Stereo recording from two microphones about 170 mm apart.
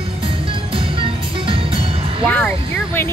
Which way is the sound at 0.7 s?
30° right (ahead or behind).